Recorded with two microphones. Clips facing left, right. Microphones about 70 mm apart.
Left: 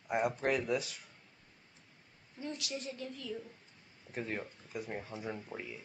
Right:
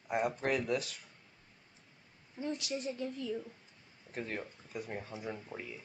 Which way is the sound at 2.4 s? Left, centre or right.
Right.